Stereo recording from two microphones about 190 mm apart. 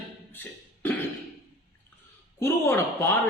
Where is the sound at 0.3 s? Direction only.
10° left (ahead or behind).